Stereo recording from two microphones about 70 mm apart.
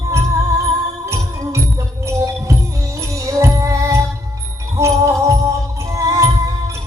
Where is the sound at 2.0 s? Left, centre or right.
Right.